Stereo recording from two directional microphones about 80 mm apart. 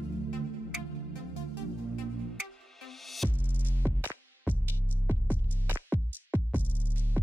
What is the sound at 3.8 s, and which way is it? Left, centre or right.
Music, right.